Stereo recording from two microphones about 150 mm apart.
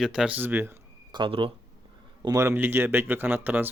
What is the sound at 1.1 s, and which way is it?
Speech, 35° right (ahead or behind).